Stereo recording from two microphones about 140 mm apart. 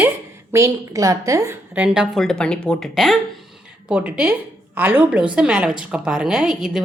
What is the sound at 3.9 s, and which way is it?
A woman's voice, 10° right (ahead or behind).